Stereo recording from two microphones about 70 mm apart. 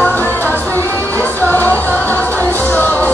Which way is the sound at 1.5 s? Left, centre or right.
Left.